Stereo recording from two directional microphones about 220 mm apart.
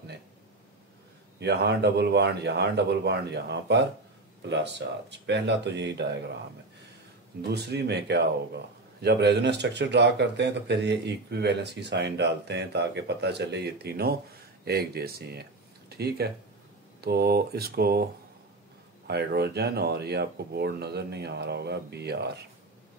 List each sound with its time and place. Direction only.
1.4 s speech: 50° right (ahead or behind)
7.5 s speech: 50° right (ahead or behind)
19.0 s speech: 45° right (ahead or behind)